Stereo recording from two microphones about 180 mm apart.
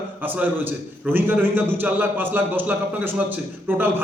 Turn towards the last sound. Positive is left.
turn(degrees=-10)  # may be behind; listen again after turning